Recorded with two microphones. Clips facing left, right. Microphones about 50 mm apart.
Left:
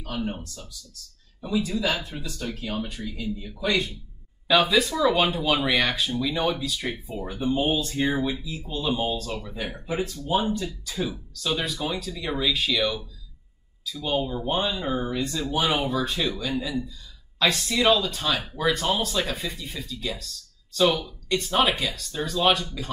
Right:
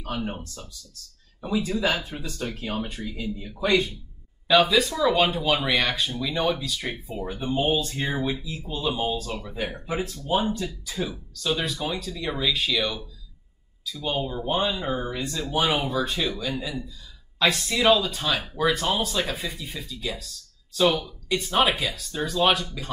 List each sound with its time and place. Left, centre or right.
0.0 s speech: centre
1.6 s speech: right
3.1 s speech: centre
3.5 s speech: right
4.5 s speech: centre
7.7 s speech: centre
8.0 s speech: centre
10.5 s speech: centre